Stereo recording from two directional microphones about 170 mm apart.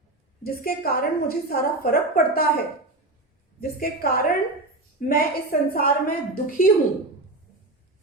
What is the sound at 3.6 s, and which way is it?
A woman's voice, 55° left (ahead or behind).